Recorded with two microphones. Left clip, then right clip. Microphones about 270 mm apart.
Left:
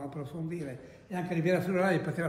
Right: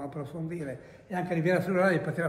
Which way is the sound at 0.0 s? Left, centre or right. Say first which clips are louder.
Right 2 dB; centre.